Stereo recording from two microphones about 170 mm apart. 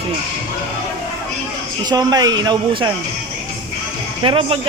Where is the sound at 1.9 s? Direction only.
25° right (ahead or behind).